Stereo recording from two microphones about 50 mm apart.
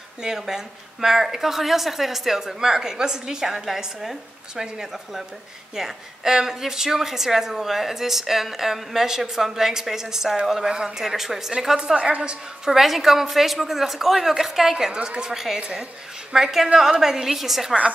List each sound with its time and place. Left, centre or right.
0.2 s a woman's voice: centre
11.8 s a woman's voice: right; by 14.9 s centre
14.9 s a woman's voice: centre
16.6 s a woman's voice: right
17.0 s a woman's voice: centre